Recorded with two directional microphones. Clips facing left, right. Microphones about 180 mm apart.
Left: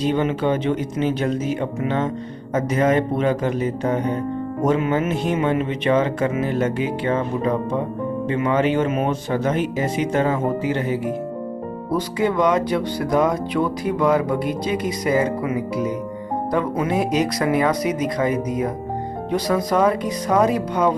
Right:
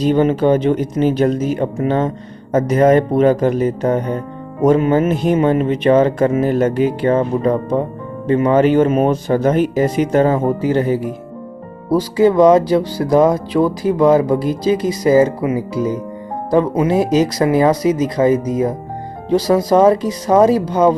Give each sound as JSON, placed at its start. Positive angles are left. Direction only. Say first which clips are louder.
{"t": 0.0, "sound": "music", "louder": "right 6 dB", "side_deg": -40}
{"t": 16.5, "sound": "speech", "louder": "right 8 dB", "side_deg": -30}